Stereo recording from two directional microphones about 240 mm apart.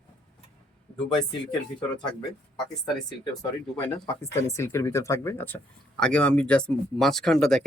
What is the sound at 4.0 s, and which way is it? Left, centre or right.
Speech, centre.